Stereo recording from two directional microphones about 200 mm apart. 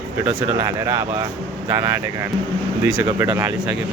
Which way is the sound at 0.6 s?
15° right (ahead or behind).